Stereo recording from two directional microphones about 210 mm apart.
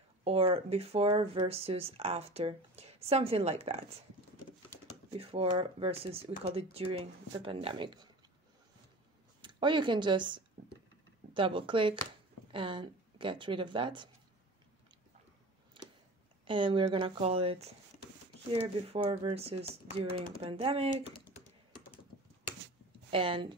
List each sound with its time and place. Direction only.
0.2 s speech: 25° right (ahead or behind)
5.1 s speech: 25° right (ahead or behind)
9.4 s speech: 20° right (ahead or behind)
15.8 s a sound: 25° right (ahead or behind)
16.4 s speech: 25° right (ahead or behind)
18.9 s speech: 30° right (ahead or behind)
23.1 s speech: 25° right (ahead or behind)